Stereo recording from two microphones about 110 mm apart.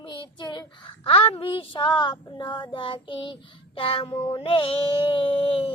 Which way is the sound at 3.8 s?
55° left (ahead or behind).